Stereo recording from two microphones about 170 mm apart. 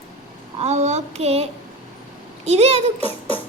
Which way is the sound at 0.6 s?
40° right (ahead or behind).